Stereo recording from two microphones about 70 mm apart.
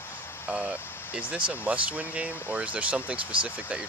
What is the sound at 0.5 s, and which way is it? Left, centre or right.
Speech, centre.